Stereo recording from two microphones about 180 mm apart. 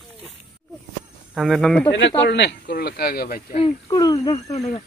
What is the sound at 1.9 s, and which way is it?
Speech, 80° left.